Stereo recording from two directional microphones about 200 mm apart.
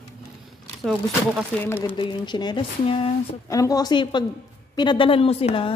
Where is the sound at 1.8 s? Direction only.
25° left (ahead or behind).